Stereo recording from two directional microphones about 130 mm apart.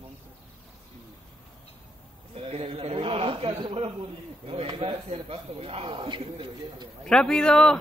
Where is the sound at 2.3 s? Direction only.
50° right (ahead or behind).